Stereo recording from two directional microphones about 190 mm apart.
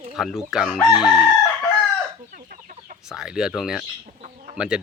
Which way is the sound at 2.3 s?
45° right (ahead or behind).